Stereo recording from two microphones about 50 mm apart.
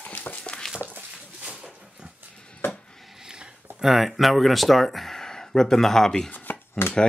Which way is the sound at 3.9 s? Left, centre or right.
Centre.